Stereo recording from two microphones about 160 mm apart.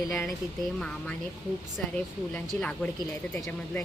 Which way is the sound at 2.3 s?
10° left (ahead or behind).